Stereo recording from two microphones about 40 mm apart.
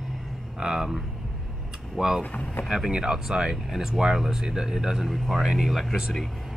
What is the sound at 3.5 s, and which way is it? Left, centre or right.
Speech, centre.